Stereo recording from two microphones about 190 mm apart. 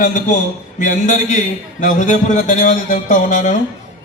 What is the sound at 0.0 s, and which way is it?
A man's voice, 40° left (ahead or behind).